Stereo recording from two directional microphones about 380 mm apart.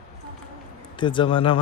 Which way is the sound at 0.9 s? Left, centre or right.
Centre.